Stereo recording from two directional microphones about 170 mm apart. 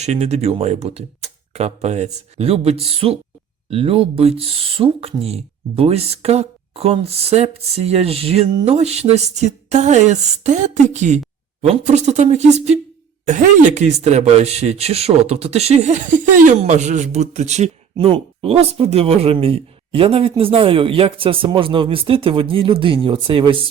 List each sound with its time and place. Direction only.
0.0 s speech: 40° right (ahead or behind)
17.9 s speech: 30° right (ahead or behind)